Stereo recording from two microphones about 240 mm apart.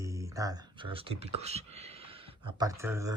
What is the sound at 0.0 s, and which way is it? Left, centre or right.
Speech, centre.